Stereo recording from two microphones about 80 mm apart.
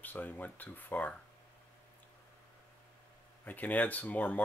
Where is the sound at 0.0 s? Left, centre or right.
Left.